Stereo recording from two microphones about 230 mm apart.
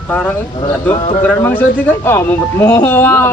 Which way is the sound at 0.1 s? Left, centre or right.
Centre.